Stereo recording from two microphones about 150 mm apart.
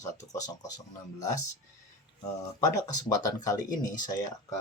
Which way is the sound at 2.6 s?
25° left (ahead or behind).